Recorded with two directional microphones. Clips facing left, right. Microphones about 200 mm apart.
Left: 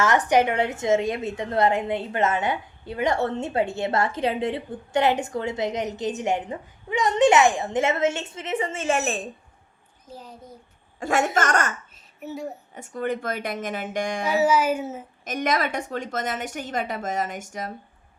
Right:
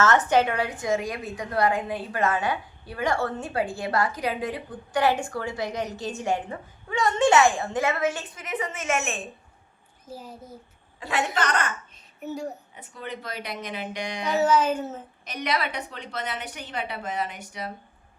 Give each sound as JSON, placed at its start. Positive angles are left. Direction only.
{"t": 0.0, "sound": "a woman's voice", "side_deg": 15}
{"t": 10.1, "sound": "a child's voice", "side_deg": -5}
{"t": 11.0, "sound": "a woman's voice", "side_deg": 45}
{"t": 12.2, "sound": "a woman's voice", "side_deg": 0}
{"t": 12.7, "sound": "a woman's voice", "side_deg": 45}
{"t": 14.3, "sound": "speech", "side_deg": 10}
{"t": 15.2, "sound": "a woman's voice", "side_deg": 45}